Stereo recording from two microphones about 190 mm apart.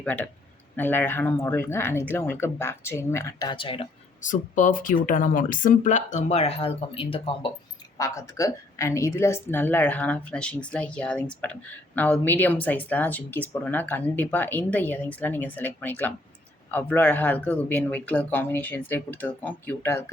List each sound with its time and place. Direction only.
0.0 s speech: 10° left (ahead or behind); by 3.8 s 25° left (ahead or behind)
4.2 s speech: 40° left (ahead or behind)
7.9 s speech: 15° left (ahead or behind)